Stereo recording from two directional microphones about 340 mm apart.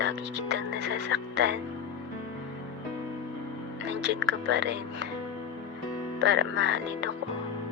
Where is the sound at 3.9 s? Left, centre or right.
Right.